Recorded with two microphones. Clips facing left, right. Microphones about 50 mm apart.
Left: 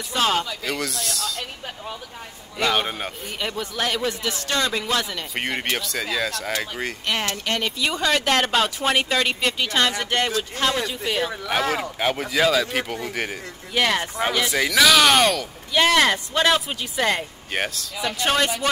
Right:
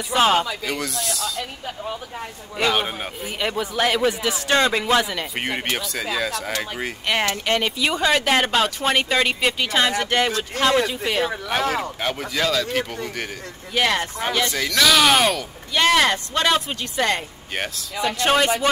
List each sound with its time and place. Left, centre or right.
0.1 s speech: centre
0.7 s speech: centre
2.6 s speech: centre
4.5 s speech: right
5.3 s speech: centre
7.2 s speech: centre